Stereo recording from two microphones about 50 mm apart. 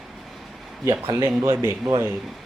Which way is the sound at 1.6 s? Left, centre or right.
Right.